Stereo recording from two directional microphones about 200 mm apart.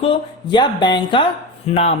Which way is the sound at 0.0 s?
25° left (ahead or behind).